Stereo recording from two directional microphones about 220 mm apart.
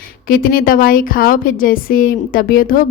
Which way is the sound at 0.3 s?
40° left (ahead or behind).